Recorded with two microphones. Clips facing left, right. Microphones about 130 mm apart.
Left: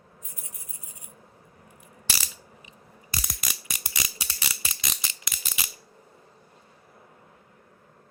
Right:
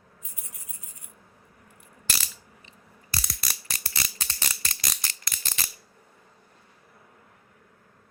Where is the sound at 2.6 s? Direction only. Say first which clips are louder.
Left 3 dB; 10° left (ahead or behind).